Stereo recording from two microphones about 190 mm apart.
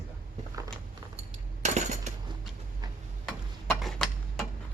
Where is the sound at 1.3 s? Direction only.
35° right (ahead or behind).